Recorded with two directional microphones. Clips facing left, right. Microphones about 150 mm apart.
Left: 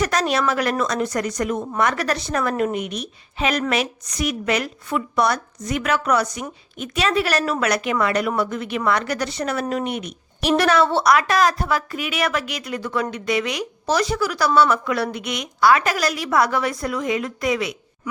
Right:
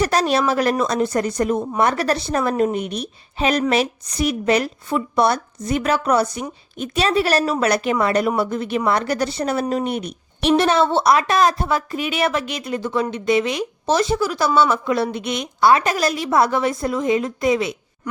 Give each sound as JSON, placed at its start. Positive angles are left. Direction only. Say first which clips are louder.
{"t": 0.0, "sound": "a woman's voice", "louder": "right 3 dB", "side_deg": -30}